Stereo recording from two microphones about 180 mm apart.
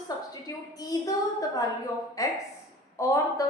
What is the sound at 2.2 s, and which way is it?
A woman's voice, 20° left (ahead or behind).